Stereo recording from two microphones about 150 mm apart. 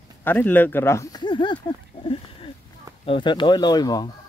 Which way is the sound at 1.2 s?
30° left (ahead or behind).